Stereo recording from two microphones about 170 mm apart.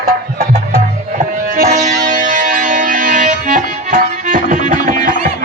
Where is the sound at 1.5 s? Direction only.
45° right (ahead or behind).